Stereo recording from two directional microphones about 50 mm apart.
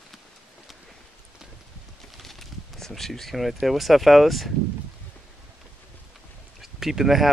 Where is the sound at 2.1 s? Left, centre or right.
Centre.